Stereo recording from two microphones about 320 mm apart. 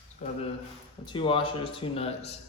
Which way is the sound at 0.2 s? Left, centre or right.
Left.